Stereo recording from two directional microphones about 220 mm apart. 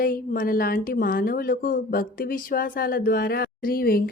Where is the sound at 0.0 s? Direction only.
40° left (ahead or behind).